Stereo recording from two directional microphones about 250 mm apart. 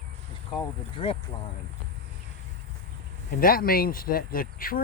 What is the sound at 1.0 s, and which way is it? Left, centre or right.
Speech, left.